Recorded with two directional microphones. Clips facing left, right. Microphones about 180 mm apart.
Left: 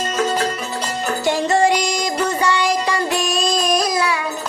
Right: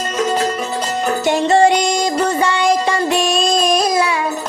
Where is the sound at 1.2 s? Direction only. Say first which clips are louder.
Right 4 dB; 25° right (ahead or behind).